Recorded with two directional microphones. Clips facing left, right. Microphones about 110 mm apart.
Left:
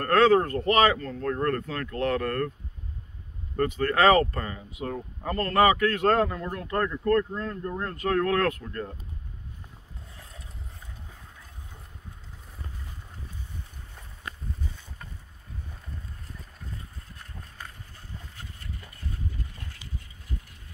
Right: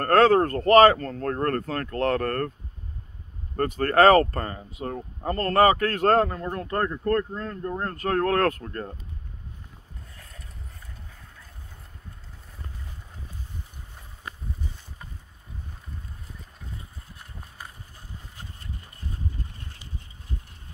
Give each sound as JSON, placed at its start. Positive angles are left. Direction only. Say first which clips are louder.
{"t": 0.0, "sound": "speech", "louder": "right 2 dB", "side_deg": -40}
{"t": 3.5, "sound": "speech", "louder": "right 4 dB", "side_deg": -40}
{"t": 10.1, "sound": "mechanisms", "louder": "left 3 dB", "side_deg": 20}
{"t": 17.2, "sound": "run", "louder": "right 1 dB", "side_deg": -10}